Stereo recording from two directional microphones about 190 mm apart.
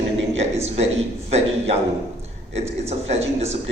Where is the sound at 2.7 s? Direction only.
35° right (ahead or behind).